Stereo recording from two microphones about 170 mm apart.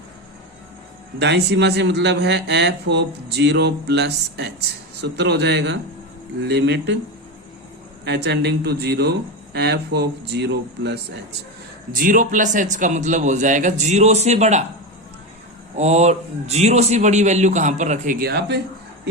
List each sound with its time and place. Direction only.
1.2 s a man's voice: 90° right
6.4 s speech: 80° right
8.0 s speech: 80° right
11.9 s speech: 50° right (ahead or behind)
15.7 s speech: 40° right (ahead or behind)
18.3 s speech: 75° right (ahead or behind)